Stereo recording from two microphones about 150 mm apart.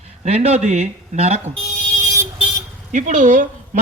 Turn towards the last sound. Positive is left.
turn(degrees=-55)  # may be behind; listen again after turning